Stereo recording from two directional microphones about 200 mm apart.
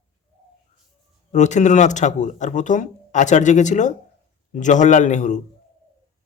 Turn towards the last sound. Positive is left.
turn(degrees=35)  # may be behind; listen again after turning